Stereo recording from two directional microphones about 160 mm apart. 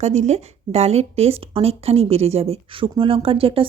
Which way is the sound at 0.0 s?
45° right (ahead or behind).